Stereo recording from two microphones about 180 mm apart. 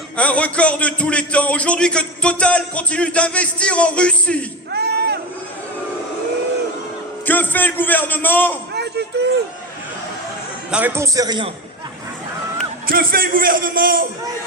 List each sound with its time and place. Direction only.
0.2 s speech: 5° left (ahead or behind)
4.7 s a sound: 65° right (ahead or behind)
7.3 s speech: 10° left (ahead or behind)
8.7 s a sound: 65° right (ahead or behind)
10.7 s a man's voice: 10° right (ahead or behind); by 11.5 s 25° right (ahead or behind)
12.9 s a man's voice: 55° right (ahead or behind)